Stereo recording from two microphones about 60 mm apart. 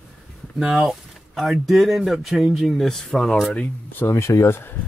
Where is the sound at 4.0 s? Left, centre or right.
Left.